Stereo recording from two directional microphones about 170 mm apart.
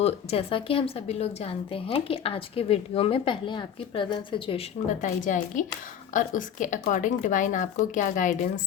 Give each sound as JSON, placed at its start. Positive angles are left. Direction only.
{"t": 0.0, "sound": "a woman's voice", "side_deg": 35}
{"t": 4.9, "sound": "speech", "side_deg": 45}